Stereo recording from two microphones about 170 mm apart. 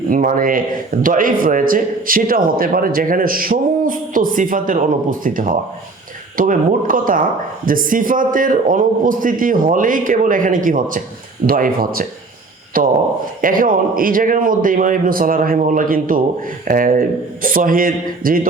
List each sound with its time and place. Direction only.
0.1 s a man's voice: 55° right (ahead or behind)